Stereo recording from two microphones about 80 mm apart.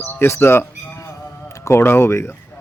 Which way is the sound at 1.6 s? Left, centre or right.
Left.